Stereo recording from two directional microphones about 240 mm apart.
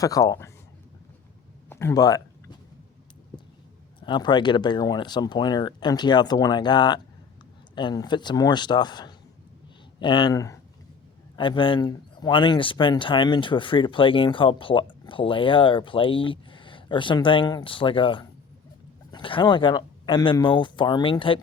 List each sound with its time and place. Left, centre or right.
0.0 s speech: centre
1.7 s a sound: centre
4.0 s speech: centre